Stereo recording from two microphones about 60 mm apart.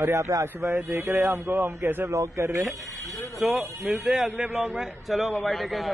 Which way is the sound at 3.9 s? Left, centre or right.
Centre.